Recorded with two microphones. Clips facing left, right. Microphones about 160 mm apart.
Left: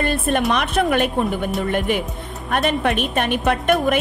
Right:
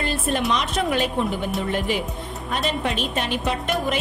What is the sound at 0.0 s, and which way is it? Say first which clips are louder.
A woman's voice: left 4 dB; 55° left (ahead or behind).